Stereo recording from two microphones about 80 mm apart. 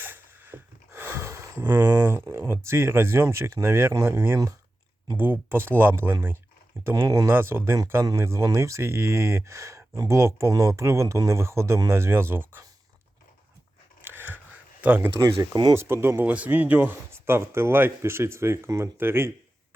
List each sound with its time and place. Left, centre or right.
0.0 s a sound: right
4.0 s speech: right
14.0 s a sound: right
15.2 s speech: right
15.7 s speech: right
16.2 s speech: centre